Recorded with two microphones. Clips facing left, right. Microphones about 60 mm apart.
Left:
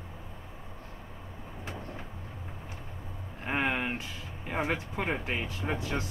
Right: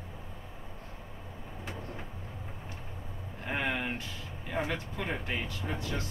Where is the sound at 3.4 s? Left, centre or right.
Left.